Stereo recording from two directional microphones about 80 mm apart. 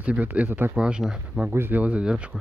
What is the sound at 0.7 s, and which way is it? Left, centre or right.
Speech, centre.